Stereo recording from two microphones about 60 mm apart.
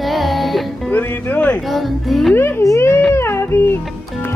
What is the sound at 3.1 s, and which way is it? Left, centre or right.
Music, left.